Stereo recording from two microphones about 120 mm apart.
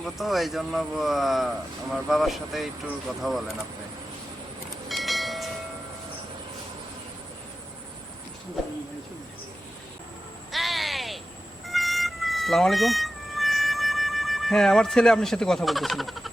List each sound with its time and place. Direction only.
0.0 s speech: centre (ahead or behind)
4.9 s train: centre (ahead or behind)
10.5 s a sound: centre (ahead or behind)
11.6 s music: centre (ahead or behind)